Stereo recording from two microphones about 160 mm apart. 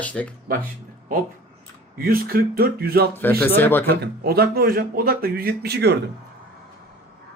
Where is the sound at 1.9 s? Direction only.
65° right (ahead or behind).